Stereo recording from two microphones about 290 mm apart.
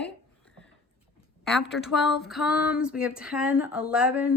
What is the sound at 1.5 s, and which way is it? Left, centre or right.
Speech, centre.